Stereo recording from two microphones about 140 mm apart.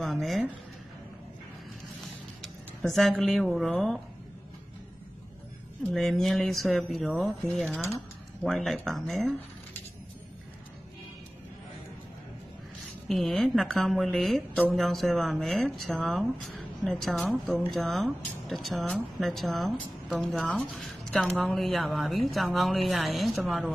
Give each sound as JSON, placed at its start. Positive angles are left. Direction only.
{"t": 0.0, "sound": "speech", "side_deg": 0}
{"t": 2.9, "sound": "speech", "side_deg": 0}
{"t": 5.9, "sound": "speech", "side_deg": 0}
{"t": 13.1, "sound": "speech", "side_deg": 0}